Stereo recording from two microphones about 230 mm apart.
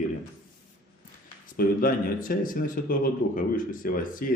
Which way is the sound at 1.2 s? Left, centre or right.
Left.